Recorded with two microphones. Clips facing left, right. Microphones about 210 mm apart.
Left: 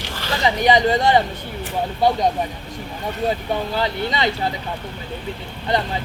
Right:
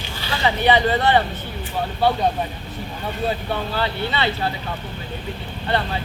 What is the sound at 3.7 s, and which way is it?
Speech, 15° left (ahead or behind).